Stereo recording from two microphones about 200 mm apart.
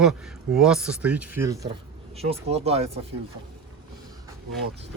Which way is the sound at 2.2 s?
30° right (ahead or behind).